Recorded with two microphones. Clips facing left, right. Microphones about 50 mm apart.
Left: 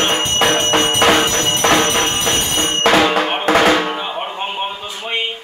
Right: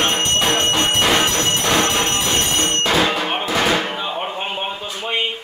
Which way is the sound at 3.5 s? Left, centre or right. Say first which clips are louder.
Left 7 dB; left.